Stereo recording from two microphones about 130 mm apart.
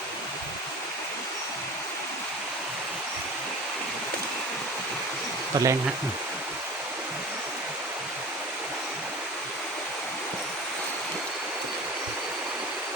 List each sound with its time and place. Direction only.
5.5 s speech: 30° right (ahead or behind)